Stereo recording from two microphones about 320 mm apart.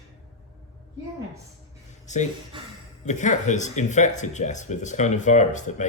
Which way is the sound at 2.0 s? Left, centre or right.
Left.